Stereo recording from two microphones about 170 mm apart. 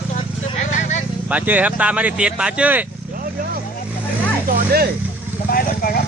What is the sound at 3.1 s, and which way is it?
Vehicle, 55° right (ahead or behind).